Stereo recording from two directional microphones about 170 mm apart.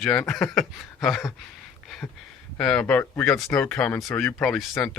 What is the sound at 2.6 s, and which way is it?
Speech, 5° left (ahead or behind).